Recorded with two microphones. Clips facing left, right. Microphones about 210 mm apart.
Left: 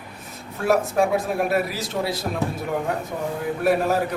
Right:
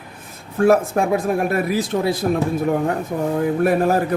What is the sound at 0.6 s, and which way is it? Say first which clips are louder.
A man's voice: right 4 dB; 50° right (ahead or behind).